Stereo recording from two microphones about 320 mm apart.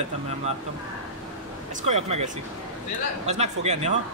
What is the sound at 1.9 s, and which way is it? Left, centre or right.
Speech, centre.